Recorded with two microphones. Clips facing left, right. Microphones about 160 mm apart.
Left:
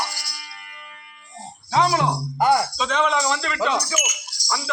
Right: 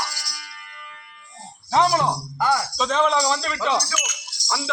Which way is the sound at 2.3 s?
20° left (ahead or behind).